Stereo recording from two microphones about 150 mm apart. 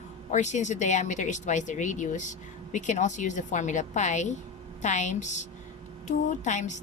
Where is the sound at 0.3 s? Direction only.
50° left (ahead or behind).